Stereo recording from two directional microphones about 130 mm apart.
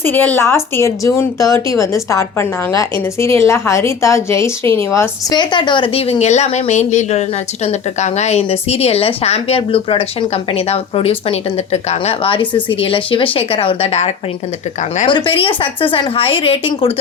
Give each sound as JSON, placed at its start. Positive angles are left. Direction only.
{"t": 0.0, "sound": "a woman's voice", "side_deg": 15}
{"t": 5.3, "sound": "a woman's voice", "side_deg": 35}
{"t": 15.0, "sound": "a woman's voice", "side_deg": 40}